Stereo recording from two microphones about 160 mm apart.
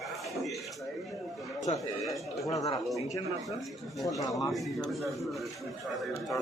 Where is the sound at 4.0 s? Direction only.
20° left (ahead or behind).